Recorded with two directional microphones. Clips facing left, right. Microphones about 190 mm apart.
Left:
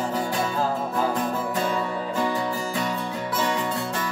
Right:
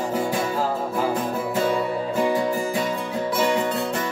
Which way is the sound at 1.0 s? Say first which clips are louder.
Right 1 dB; 10° right (ahead or behind).